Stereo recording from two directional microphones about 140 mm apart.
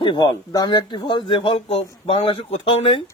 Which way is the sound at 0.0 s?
35° left (ahead or behind).